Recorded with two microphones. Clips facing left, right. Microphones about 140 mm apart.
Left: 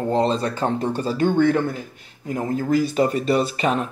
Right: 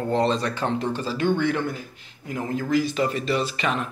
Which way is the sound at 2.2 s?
35° left (ahead or behind).